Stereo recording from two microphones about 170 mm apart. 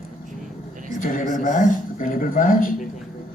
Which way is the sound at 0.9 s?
50° left (ahead or behind).